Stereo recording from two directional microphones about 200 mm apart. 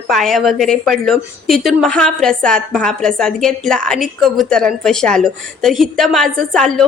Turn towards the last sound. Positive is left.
turn(degrees=0)  # may be behind; listen again after turning